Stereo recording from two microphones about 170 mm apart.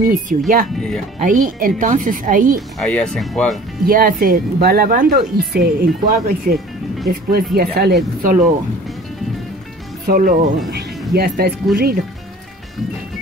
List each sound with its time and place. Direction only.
0.3 s speech: 50° right (ahead or behind)
0.7 s speech: 5° left (ahead or behind)
1.2 s speech: 50° right (ahead or behind)
2.8 s speech: 5° left (ahead or behind)
3.8 s speech: 60° right (ahead or behind)
10.0 s speech: 55° right (ahead or behind)